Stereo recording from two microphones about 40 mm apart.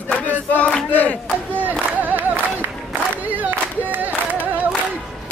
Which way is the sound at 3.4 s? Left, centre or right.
Right.